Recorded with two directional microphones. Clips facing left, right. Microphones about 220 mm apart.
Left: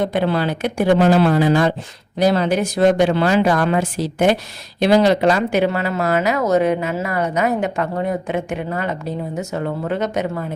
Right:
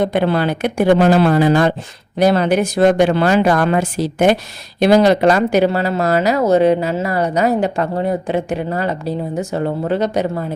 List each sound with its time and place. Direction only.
0.0 s speech: 60° right (ahead or behind); by 10.4 s 35° right (ahead or behind)